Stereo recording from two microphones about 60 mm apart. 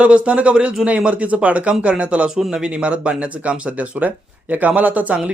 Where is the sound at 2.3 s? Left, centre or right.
Centre.